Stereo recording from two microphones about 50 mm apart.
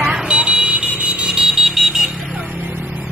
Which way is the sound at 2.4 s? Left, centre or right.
Right.